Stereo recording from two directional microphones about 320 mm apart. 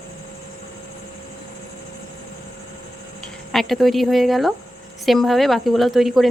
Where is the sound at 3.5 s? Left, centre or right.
Centre.